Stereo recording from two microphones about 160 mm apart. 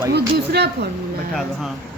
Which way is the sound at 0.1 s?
90° right.